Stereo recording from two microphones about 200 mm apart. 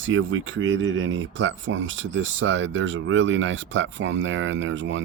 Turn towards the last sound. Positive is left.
turn(degrees=-65)  # may be behind; listen again after turning